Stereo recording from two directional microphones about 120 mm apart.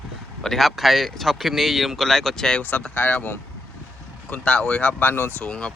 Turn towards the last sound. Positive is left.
turn(degrees=10)  # may be behind; listen again after turning